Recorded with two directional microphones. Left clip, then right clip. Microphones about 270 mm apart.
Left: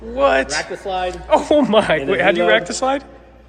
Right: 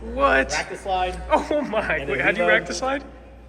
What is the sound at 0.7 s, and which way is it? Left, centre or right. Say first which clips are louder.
Speech: left 2 dB; left.